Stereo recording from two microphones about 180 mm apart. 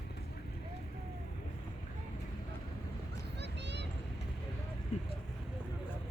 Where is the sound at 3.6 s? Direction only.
75° right (ahead or behind).